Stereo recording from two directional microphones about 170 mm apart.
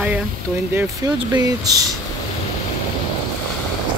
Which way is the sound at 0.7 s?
20° right (ahead or behind).